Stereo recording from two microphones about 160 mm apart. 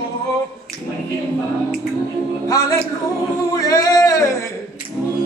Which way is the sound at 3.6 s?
20° left (ahead or behind).